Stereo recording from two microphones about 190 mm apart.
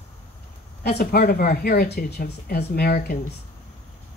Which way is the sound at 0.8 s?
55° left (ahead or behind).